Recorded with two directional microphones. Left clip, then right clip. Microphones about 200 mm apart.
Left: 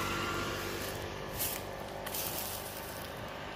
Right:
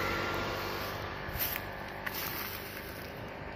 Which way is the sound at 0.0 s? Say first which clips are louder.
Right 2 dB; 55° left (ahead or behind).